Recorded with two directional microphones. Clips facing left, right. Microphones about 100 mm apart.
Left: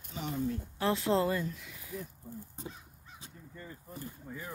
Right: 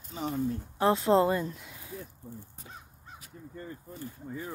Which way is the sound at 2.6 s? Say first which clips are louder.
Left 6 dB; 30° left (ahead or behind).